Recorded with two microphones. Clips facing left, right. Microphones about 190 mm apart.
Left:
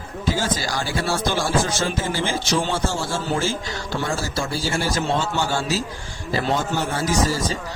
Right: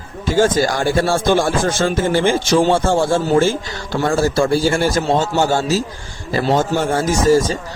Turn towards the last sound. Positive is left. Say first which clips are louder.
# right 8 dB
turn(degrees=-45)  # may be behind; listen again after turning